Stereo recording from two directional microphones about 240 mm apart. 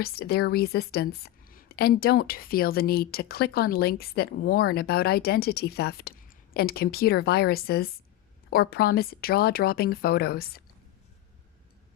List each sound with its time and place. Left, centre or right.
0.0 s a woman's voice: left